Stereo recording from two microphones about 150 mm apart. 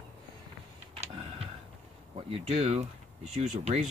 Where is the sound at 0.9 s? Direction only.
40° right (ahead or behind).